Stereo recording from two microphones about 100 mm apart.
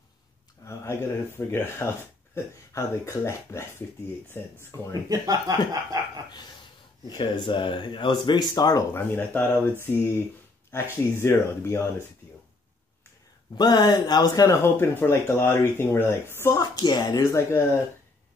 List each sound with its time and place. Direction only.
0.7 s speech: 25° left (ahead or behind)
5.1 s a sound: 35° right (ahead or behind)
7.1 s speech: 50° left (ahead or behind)
8.9 s speech: 20° left (ahead or behind)
13.6 s speech: 45° left (ahead or behind); by 16.5 s 25° left (ahead or behind)
16.5 s speech: 45° left (ahead or behind)